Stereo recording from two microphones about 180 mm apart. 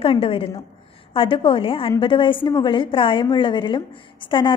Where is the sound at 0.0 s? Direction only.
30° left (ahead or behind).